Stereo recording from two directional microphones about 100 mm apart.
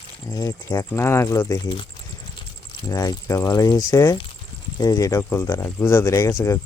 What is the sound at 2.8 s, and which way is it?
Speech, 40° left (ahead or behind).